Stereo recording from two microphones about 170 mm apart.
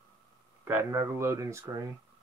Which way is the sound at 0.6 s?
15° right (ahead or behind).